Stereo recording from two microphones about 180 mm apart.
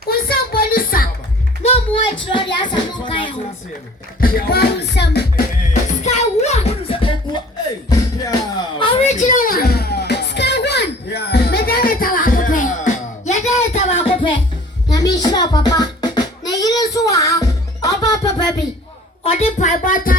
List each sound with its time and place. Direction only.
0.1 s music: 55° left (ahead or behind)
1.6 s music: 30° left (ahead or behind)
2.2 s a sound: 25° left (ahead or behind)
4.2 s music: 55° left (ahead or behind)
6.0 s music: 40° left (ahead or behind)
7.9 s music: 20° left (ahead or behind)
8.8 s music: 30° left (ahead or behind)
14.8 s a sound: 20° left (ahead or behind)
19.2 s a sound: 35° left (ahead or behind)